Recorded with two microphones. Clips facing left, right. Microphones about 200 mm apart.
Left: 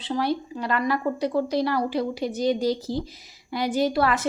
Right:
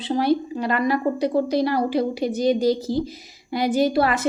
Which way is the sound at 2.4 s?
45° right (ahead or behind).